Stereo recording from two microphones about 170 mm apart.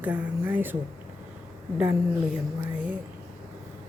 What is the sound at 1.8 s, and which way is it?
A woman's voice, 10° right (ahead or behind).